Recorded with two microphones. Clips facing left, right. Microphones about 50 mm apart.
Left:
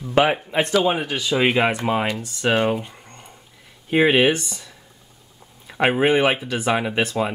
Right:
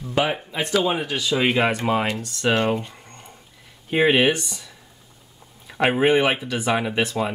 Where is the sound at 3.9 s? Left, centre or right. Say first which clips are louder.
Left 1 dB; centre.